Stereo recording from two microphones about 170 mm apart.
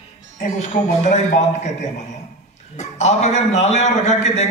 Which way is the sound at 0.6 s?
45° left (ahead or behind).